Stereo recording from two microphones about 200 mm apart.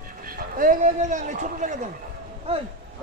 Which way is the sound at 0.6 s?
40° right (ahead or behind).